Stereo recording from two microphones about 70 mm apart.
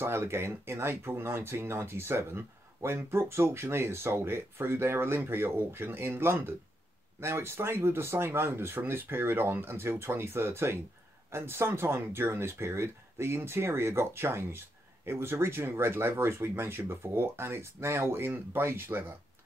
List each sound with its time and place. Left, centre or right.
0.0 s speech: right